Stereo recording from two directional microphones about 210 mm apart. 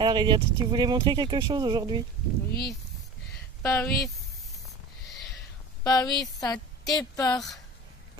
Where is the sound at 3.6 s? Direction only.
10° left (ahead or behind).